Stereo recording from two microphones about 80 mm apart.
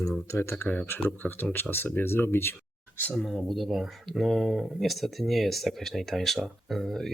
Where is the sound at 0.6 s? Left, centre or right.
Left.